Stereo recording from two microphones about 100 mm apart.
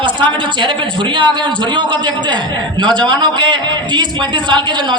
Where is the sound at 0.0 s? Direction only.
55° right (ahead or behind).